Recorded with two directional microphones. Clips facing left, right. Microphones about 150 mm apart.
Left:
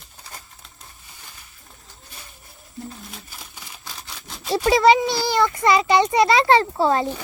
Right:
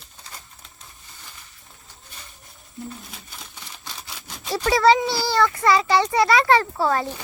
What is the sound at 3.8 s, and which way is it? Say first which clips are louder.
Single-lens reflex camera: even; centre (ahead or behind).